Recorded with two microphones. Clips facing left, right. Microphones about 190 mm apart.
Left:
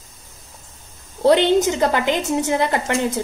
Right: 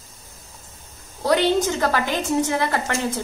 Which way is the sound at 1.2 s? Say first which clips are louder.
Left 4 dB; 20° left (ahead or behind).